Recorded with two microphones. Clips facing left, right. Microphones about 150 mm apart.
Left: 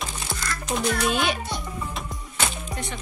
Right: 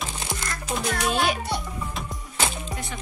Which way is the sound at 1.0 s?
Centre (ahead or behind).